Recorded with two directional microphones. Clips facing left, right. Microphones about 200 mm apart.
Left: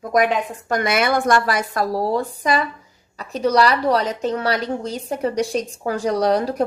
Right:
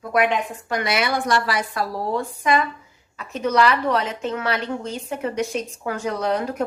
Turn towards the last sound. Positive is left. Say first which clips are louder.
# left 5 dB
turn(degrees=35)  # may be behind; listen again after turning